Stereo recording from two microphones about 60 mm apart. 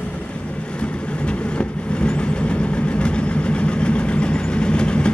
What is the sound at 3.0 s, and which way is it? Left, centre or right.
Vehicle, centre.